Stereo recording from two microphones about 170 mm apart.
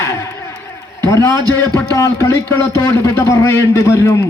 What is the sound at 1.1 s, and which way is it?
A man's voice, 15° left (ahead or behind).